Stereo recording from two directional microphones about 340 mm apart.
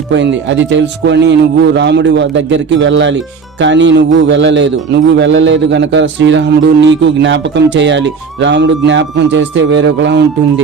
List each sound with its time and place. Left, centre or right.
0.1 s a man's voice: right